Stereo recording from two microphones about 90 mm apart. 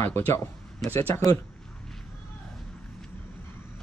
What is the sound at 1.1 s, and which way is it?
Speech, 40° left (ahead or behind).